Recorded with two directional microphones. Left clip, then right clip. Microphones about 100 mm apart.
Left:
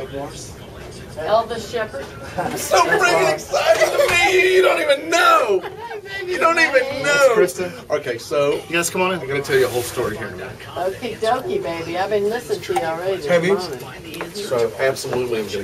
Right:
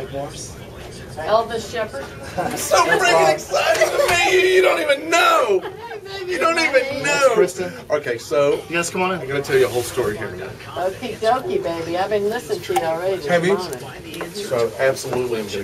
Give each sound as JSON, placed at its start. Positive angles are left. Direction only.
{"t": 1.2, "sound": "speech", "side_deg": 5}
{"t": 8.7, "sound": "speech", "side_deg": 45}
{"t": 9.3, "sound": "speech", "side_deg": -5}